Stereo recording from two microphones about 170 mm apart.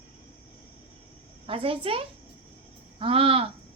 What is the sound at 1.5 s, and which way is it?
A woman's voice, 30° right (ahead or behind).